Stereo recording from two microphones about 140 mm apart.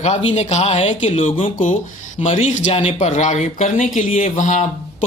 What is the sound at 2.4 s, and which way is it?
Speech, 60° left (ahead or behind).